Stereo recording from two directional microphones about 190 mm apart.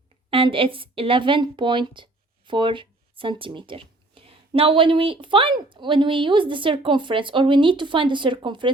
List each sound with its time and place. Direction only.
0.3 s a woman's voice: 30° right (ahead or behind)